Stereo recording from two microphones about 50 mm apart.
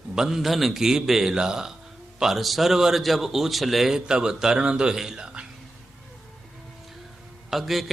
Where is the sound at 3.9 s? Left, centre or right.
Centre.